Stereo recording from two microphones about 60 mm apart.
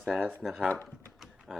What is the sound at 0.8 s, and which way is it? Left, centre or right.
Typing, centre.